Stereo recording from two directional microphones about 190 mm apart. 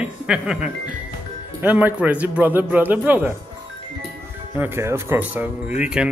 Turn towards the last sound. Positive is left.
turn(degrees=-5)  # may be behind; listen again after turning